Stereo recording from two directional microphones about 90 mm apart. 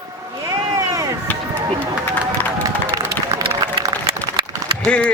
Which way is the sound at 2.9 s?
45° right (ahead or behind).